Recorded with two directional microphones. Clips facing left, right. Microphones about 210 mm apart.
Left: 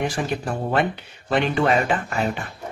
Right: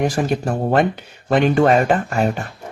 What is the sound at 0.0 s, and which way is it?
Speech, 45° right (ahead or behind).